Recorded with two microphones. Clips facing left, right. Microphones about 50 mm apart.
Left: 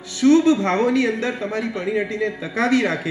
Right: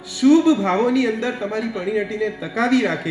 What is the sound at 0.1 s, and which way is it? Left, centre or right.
A man's voice, centre.